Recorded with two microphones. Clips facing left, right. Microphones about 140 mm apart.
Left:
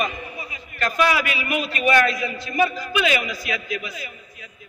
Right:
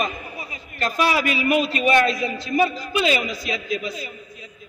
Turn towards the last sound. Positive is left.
turn(degrees=-30)  # may be behind; listen again after turning